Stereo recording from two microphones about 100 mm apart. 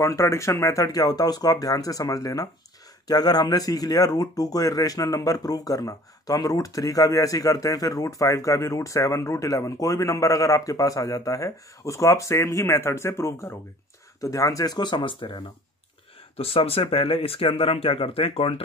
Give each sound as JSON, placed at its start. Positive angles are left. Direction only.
{"t": 0.0, "sound": "speech", "side_deg": 30}
{"t": 16.3, "sound": "speech", "side_deg": 75}